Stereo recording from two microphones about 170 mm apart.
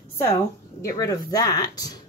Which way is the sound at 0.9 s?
20° left (ahead or behind).